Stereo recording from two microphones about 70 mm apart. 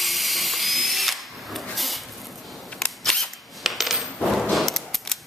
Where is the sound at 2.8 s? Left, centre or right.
Centre.